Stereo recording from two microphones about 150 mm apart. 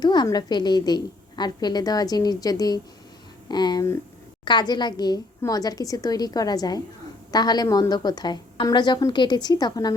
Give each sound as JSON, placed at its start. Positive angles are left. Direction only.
{"t": 0.0, "sound": "a woman's voice", "side_deg": 30}